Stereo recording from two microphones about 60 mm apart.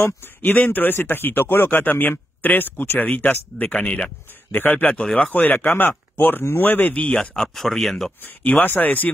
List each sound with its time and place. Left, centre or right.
0.0 s speech: left
4.5 s speech: left
7.4 s speech: centre
8.5 s speech: left